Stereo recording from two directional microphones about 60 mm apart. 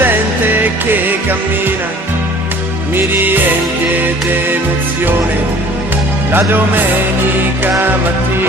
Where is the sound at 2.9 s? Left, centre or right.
Right.